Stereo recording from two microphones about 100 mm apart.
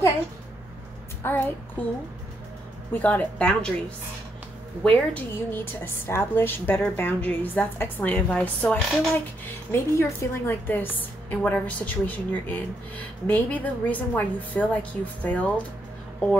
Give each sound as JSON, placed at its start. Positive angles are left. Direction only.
{"t": 1.2, "sound": "a woman's voice", "side_deg": 20}
{"t": 2.9, "sound": "a woman's voice", "side_deg": 15}
{"t": 4.8, "sound": "a woman's voice", "side_deg": 15}
{"t": 9.7, "sound": "a woman's voice", "side_deg": 25}